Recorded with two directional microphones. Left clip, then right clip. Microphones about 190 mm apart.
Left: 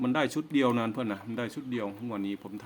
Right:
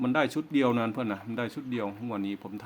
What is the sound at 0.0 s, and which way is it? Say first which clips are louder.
A man's voice: right 2 dB; 5° right (ahead or behind).